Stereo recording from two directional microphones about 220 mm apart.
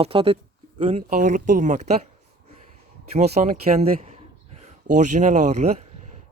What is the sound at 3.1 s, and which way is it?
Speech, 30° right (ahead or behind).